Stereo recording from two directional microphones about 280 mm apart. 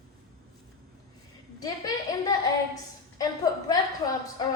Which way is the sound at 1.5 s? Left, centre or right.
Centre.